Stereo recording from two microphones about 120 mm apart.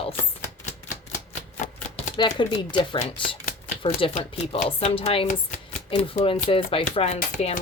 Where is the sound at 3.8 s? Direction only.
60° left (ahead or behind).